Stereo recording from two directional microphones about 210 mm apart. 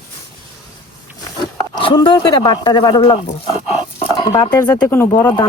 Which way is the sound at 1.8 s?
25° left (ahead or behind).